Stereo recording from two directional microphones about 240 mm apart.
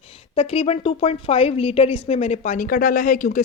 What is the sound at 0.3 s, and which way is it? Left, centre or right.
Speech, left.